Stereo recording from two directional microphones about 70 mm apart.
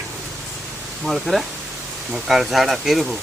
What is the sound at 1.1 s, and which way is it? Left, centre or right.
Speech, centre.